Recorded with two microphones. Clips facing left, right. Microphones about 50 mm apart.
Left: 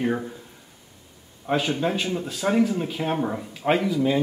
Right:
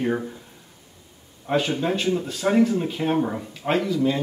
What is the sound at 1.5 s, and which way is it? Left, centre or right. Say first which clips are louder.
Speech: right 1 dB; centre.